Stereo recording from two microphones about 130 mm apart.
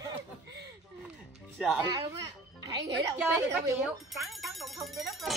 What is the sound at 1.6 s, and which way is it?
Speech, 5° right (ahead or behind).